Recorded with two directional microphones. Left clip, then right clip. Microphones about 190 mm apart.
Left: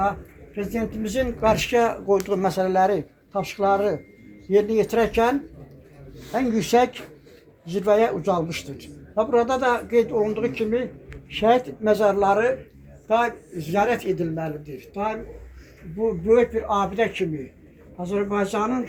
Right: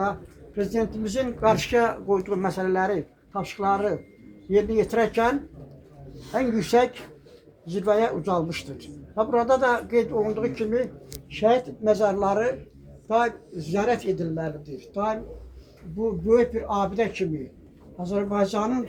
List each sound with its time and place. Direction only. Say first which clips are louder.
0.5 s speech: right 2 dB; 40° left (ahead or behind)
6.3 s speech: left 1 dB; 40° left (ahead or behind)
14.8 s speech: even; 30° left (ahead or behind)
16.2 s a man's voice: left 2 dB; 15° left (ahead or behind); by 18.8 s centre (ahead or behind)